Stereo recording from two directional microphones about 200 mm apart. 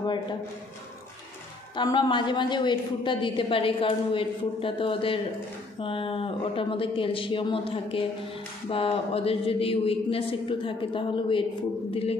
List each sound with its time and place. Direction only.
0.0 s a woman's voice: 20° left (ahead or behind)
1.8 s a woman's voice: 25° left (ahead or behind)